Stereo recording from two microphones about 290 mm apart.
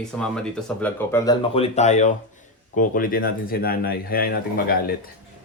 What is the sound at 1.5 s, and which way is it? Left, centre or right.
Speech, left.